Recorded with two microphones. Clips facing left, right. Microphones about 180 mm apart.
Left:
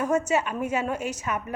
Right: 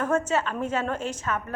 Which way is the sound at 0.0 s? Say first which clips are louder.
Left 1 dB; 10° left (ahead or behind).